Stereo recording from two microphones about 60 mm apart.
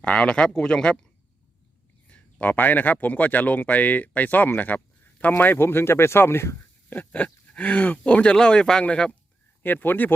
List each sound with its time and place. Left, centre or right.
0.0 s speech: left
2.0 s speech: left
6.9 s speech: left
9.8 s speech: left